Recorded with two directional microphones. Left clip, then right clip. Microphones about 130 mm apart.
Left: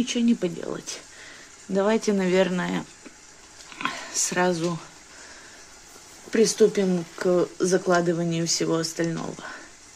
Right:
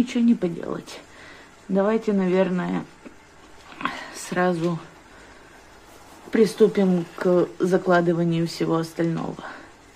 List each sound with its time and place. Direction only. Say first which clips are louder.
0.0 s speech: right 2 dB; 20° left (ahead or behind)
6.3 s speech: right 1 dB; 20° left (ahead or behind)